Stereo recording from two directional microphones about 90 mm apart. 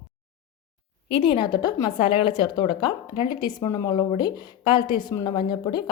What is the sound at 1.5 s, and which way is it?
Speech, 50° left (ahead or behind).